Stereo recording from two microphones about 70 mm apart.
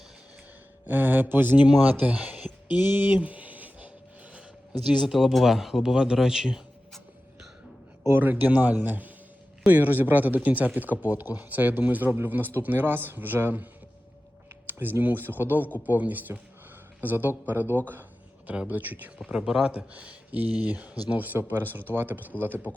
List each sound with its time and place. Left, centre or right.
0.9 s speech: right
2.8 s a sound: right
5.0 s speech: centre
8.0 s speech: right
14.7 s speech: right
18.4 s speech: centre
18.7 s speech: right
19.3 s speech: centre
19.7 s speech: centre